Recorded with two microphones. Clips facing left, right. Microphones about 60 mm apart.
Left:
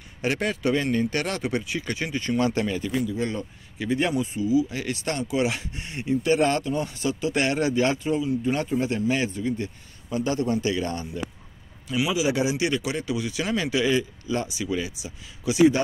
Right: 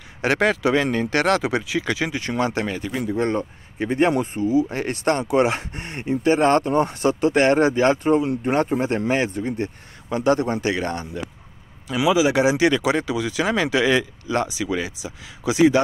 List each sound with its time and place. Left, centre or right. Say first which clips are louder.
0.2 s speech: right 6 dB; right
2.4 s speech: right 1 dB; right
10.0 s speech: right 5 dB; right
11.9 s speech: right 6 dB; right